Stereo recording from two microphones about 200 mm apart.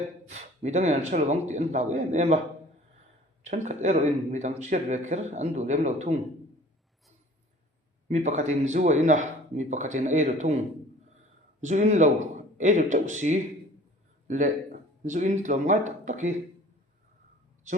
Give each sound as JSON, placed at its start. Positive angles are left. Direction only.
{"t": 0.3, "sound": "speech", "side_deg": -35}
{"t": 3.4, "sound": "speech", "side_deg": -35}
{"t": 8.0, "sound": "speech", "side_deg": -35}
{"t": 11.6, "sound": "speech", "side_deg": -35}